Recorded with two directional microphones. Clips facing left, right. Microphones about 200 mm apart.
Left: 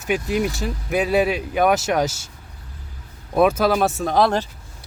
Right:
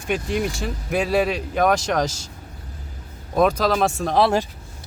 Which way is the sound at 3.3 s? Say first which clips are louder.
Left 2 dB; 5° left (ahead or behind).